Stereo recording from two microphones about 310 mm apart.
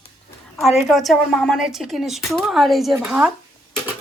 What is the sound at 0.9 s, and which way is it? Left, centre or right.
A woman's voice, centre.